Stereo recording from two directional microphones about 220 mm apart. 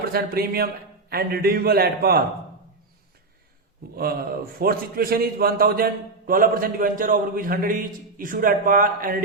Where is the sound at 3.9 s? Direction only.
45° right (ahead or behind).